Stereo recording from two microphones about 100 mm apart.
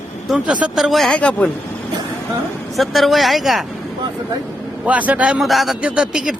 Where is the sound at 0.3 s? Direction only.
10° right (ahead or behind).